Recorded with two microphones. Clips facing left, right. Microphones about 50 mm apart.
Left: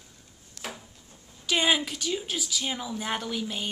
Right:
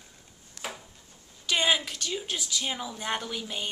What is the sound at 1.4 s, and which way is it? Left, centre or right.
Speech, centre.